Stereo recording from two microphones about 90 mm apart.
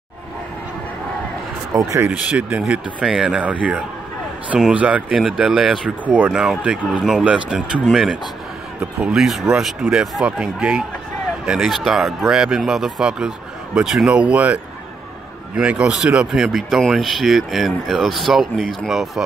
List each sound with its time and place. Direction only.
1.7 s speech: 40° right (ahead or behind)
2.0 s speech: 15° right (ahead or behind)
5.1 s speech: 5° right (ahead or behind)
5.9 s speech: 15° right (ahead or behind)
6.3 s speech: 5° right (ahead or behind)
7.8 s speech: centre (ahead or behind)